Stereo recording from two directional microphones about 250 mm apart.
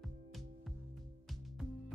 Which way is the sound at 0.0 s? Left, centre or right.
Centre.